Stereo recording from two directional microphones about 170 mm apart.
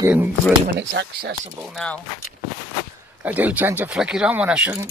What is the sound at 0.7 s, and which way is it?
Speech, 85° right.